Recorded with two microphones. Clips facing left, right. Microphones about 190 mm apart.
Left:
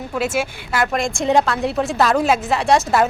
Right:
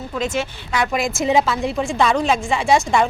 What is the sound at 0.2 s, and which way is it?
A woman's voice, 5° left (ahead or behind).